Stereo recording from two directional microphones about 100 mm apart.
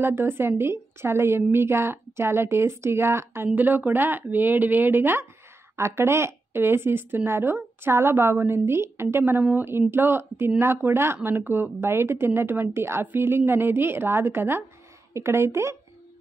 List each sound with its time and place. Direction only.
0.0 s a woman's voice: 25° right (ahead or behind)